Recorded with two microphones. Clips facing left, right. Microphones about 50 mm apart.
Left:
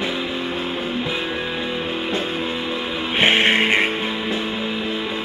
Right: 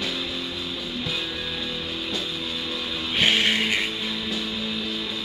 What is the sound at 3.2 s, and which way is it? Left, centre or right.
Music, left.